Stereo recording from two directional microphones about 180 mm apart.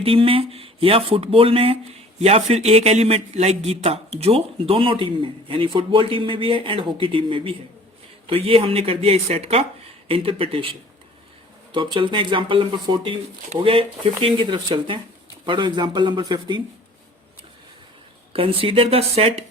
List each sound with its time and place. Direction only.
0.0 s speech: 30° right (ahead or behind)
18.3 s speech: 30° right (ahead or behind)